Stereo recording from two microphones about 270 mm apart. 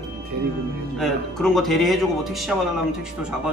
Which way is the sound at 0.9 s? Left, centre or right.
Centre.